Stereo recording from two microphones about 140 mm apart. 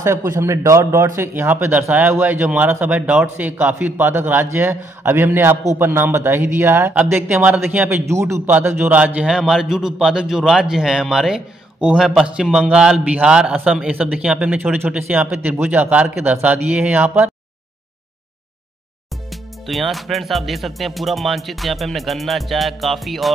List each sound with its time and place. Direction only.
0.0 s speech: 20° right (ahead or behind)
19.3 s speech: centre (ahead or behind)